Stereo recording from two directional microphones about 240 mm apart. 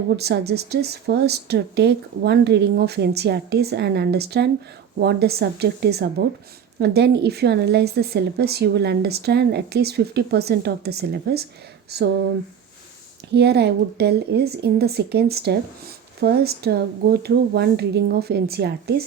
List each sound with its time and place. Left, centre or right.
0.2 s a woman's voice: right
13.3 s a woman's voice: right